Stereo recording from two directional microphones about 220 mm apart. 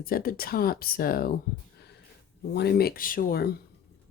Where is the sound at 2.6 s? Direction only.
45° left (ahead or behind).